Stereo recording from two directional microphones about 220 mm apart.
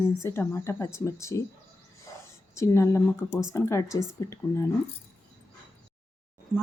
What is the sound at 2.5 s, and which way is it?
Speech, 15° left (ahead or behind).